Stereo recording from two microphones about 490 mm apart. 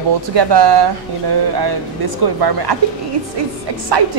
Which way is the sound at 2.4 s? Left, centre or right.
Right.